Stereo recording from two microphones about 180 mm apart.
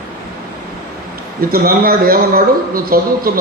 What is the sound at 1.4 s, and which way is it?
A man's voice, 55° right (ahead or behind).